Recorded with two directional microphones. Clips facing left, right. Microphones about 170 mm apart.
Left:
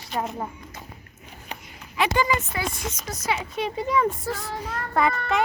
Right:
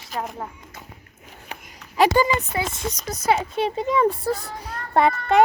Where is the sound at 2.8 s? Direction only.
35° right (ahead or behind).